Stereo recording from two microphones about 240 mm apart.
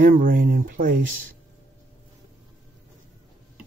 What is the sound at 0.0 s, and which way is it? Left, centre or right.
Speech, right.